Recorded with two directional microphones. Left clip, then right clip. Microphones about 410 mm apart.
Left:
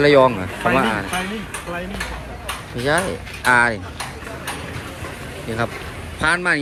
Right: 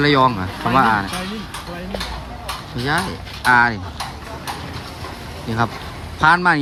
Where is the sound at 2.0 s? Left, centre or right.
Right.